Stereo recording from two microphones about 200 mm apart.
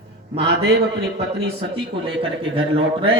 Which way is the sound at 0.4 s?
60° right (ahead or behind).